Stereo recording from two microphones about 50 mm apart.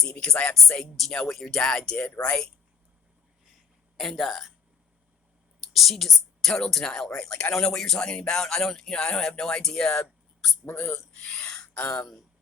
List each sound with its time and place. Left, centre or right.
0.0 s speech: centre
3.9 s speech: centre
5.7 s a woman's voice: centre
10.7 s speech: left
10.9 s a sound: centre
11.7 s speech: left